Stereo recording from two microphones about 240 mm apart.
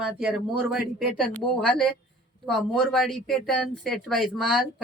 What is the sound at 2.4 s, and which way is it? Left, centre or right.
A woman's voice, centre.